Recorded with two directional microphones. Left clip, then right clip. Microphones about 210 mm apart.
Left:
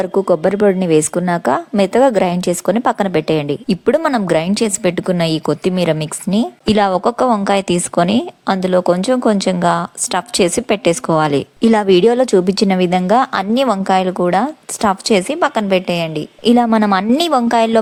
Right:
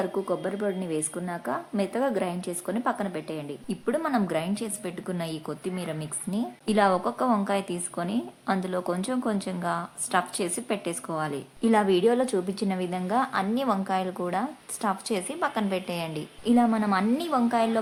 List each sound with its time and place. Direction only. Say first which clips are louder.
0.0 s a woman's voice: left 14 dB; 40° left (ahead or behind)